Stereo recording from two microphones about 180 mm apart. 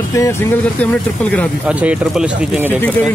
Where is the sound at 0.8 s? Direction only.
5° left (ahead or behind).